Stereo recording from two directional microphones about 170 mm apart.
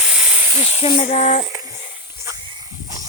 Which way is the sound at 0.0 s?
5° right (ahead or behind).